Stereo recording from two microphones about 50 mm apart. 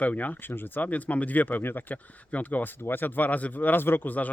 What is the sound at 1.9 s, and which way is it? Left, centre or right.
Speech, left.